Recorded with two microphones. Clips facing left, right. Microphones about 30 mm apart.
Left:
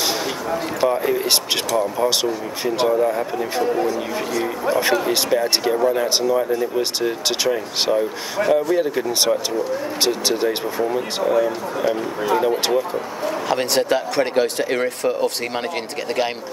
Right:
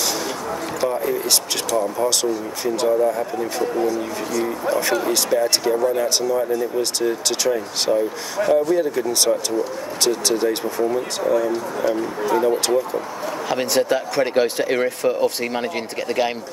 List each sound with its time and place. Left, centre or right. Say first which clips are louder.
0.7 s speech: left 2 dB; left
14.3 s speech: right 1 dB; centre
15.5 s speech: even; centre